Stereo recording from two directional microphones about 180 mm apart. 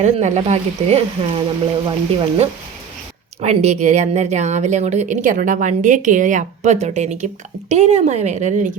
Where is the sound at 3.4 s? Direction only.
40° right (ahead or behind).